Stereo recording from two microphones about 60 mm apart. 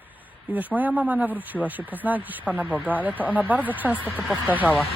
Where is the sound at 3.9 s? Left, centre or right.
Left.